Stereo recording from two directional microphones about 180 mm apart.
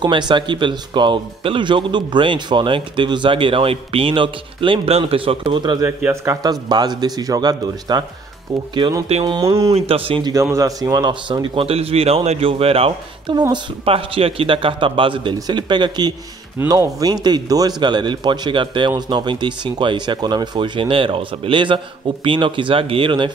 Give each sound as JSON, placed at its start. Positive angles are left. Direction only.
{"t": 0.0, "sound": "a man's voice", "side_deg": -25}
{"t": 9.8, "sound": "speech", "side_deg": -30}
{"t": 10.3, "sound": "a man's voice", "side_deg": -15}